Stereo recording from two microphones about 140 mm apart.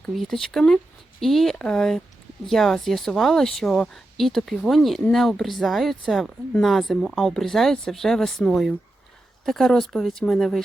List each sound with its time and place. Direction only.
0.0 s speech: centre (ahead or behind)